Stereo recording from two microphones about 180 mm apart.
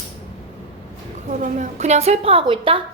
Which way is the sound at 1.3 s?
45° right (ahead or behind).